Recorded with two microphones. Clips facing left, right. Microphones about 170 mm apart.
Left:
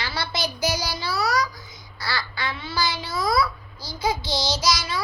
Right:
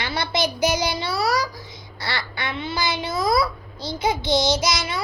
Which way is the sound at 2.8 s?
55° right (ahead or behind).